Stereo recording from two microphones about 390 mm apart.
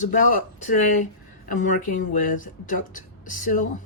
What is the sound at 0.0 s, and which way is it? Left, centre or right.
Speech, centre.